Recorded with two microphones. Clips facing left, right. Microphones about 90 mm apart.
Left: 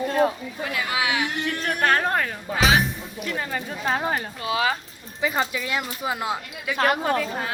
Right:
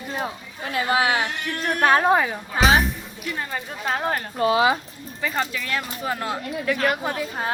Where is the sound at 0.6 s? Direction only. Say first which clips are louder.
Right 5 dB; 35° right (ahead or behind).